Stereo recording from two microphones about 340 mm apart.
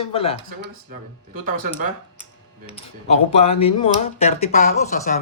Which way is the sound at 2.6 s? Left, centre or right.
Centre.